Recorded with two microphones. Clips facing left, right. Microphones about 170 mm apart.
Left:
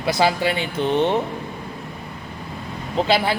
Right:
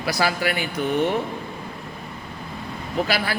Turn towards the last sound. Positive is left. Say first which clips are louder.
# left 4 dB
turn(degrees=25)  # may be behind; listen again after turning